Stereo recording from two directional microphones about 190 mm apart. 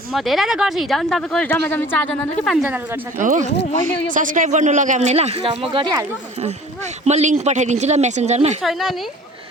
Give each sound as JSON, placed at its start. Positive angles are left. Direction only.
{"t": 0.1, "sound": "speech", "side_deg": 0}
{"t": 3.2, "sound": "speech", "side_deg": -40}
{"t": 7.0, "sound": "speech", "side_deg": -35}
{"t": 8.6, "sound": "speech", "side_deg": 0}